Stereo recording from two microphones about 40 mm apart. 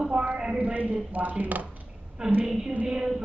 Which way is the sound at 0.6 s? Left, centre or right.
Right.